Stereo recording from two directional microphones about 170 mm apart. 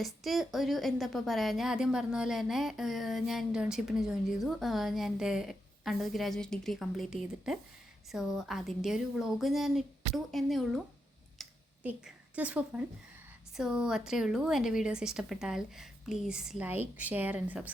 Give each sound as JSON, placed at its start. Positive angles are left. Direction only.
{"t": 0.0, "sound": "a woman's voice", "side_deg": 0}
{"t": 11.8, "sound": "a woman's voice", "side_deg": -10}